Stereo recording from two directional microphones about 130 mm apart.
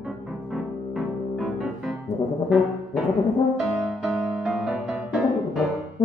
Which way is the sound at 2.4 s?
Centre (ahead or behind).